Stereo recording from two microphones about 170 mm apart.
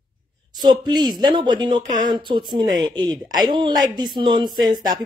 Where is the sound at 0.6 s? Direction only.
25° right (ahead or behind).